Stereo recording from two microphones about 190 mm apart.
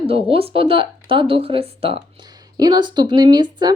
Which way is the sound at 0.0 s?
30° right (ahead or behind).